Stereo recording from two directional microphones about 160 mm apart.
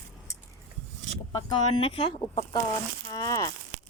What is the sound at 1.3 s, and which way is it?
Speech, 30° left (ahead or behind).